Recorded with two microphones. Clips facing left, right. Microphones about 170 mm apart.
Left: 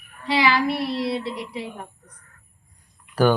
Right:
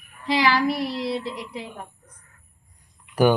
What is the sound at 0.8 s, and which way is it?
Child singing, 65° left (ahead or behind).